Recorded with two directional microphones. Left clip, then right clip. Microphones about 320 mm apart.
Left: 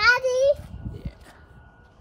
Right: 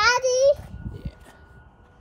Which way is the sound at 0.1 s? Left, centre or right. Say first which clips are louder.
Even; right.